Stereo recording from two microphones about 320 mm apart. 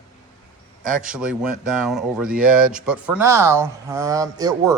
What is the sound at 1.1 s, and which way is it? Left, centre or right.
Speech, centre.